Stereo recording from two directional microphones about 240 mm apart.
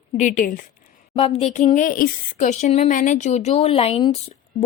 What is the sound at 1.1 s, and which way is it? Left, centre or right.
Speech, left.